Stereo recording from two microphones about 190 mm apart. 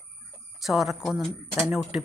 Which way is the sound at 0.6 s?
Centre (ahead or behind).